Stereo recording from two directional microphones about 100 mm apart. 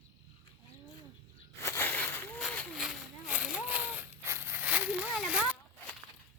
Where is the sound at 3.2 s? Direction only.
10° right (ahead or behind).